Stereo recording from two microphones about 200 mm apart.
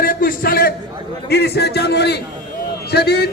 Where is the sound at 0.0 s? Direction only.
45° left (ahead or behind).